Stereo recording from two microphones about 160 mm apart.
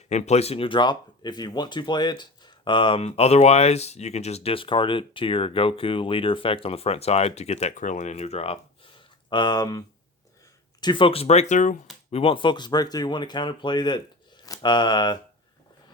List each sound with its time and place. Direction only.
0.1 s speech: 45° left (ahead or behind)
9.3 s speech: 25° left (ahead or behind); by 11.8 s 50° left (ahead or behind)
12.1 s speech: 35° left (ahead or behind)